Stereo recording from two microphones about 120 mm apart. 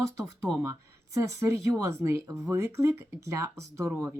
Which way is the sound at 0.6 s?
25° right (ahead or behind).